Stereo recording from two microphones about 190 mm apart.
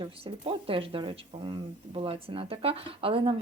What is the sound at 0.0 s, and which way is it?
Speech, 30° right (ahead or behind).